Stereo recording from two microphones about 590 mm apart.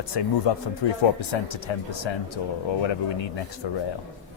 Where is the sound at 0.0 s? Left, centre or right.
Left.